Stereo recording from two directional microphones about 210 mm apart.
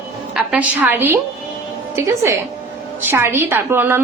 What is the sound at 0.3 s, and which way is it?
A woman's voice, 5° right (ahead or behind).